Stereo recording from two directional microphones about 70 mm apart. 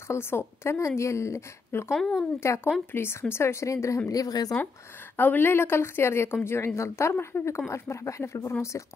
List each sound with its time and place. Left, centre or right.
0.1 s speech: left
2.0 s speech: centre
2.4 s a woman's voice: left
4.1 s a woman's voice: left
5.1 s a woman's voice: left